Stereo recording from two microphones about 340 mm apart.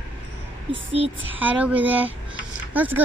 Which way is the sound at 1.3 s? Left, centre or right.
Centre.